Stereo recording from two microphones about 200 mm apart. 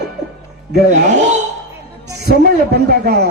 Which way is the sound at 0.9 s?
35° right (ahead or behind).